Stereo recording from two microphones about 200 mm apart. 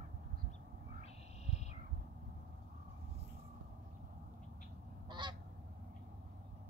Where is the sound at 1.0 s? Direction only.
35° left (ahead or behind).